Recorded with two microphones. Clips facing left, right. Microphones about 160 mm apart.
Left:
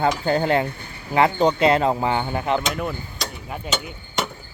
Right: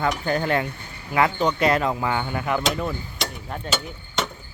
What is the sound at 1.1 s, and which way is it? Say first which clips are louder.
Speech: left 3 dB; 30° left (ahead or behind).